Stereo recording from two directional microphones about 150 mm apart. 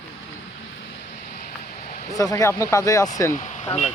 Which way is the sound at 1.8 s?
50° left (ahead or behind).